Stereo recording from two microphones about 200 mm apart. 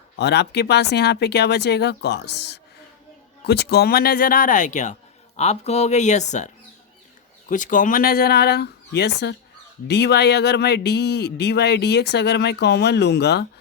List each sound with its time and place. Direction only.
0.2 s speech: 55° left (ahead or behind)